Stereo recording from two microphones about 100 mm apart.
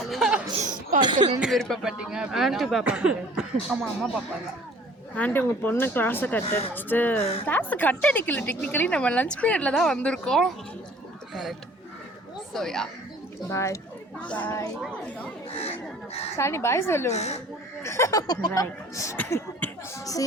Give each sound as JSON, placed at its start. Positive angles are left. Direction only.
{"t": 0.0, "sound": "laughter", "side_deg": 0}
{"t": 0.9, "sound": "speech", "side_deg": -50}
{"t": 1.4, "sound": "speech", "side_deg": 0}
{"t": 5.1, "sound": "a woman's voice", "side_deg": 20}
{"t": 12.5, "sound": "speech", "side_deg": 5}
{"t": 13.5, "sound": "speech", "side_deg": 30}
{"t": 14.3, "sound": "a woman's voice", "side_deg": 15}
{"t": 16.4, "sound": "speech", "side_deg": 25}
{"t": 17.2, "sound": "speech", "side_deg": 90}
{"t": 17.8, "sound": "speech", "side_deg": 30}
{"t": 19.1, "sound": "a woman's voice", "side_deg": 15}